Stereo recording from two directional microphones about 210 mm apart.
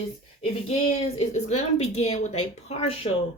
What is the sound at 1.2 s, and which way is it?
A woman's voice, 30° left (ahead or behind).